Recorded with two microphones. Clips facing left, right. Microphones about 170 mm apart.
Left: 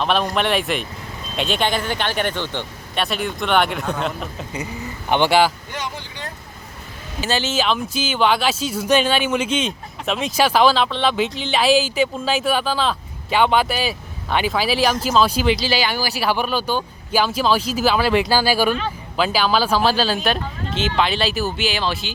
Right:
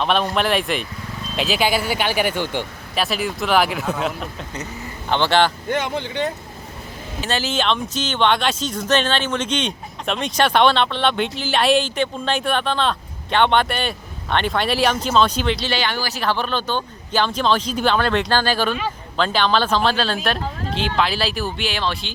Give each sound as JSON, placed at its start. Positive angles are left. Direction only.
{"t": 0.0, "sound": "speech", "side_deg": 0}
{"t": 4.5, "sound": "speech", "side_deg": 10}
{"t": 5.7, "sound": "speech", "side_deg": -60}
{"t": 7.2, "sound": "speech", "side_deg": 0}